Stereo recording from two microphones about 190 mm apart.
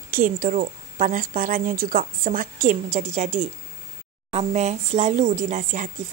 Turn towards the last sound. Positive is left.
turn(degrees=-40)  # may be behind; listen again after turning